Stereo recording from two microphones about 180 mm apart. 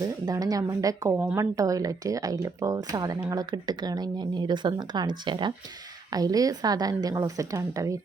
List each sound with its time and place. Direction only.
0.0 s speech: 20° right (ahead or behind)
1.2 s a woman's voice: 5° right (ahead or behind)
1.5 s speech: 20° right (ahead or behind)